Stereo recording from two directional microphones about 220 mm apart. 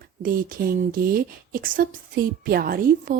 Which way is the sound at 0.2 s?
40° right (ahead or behind).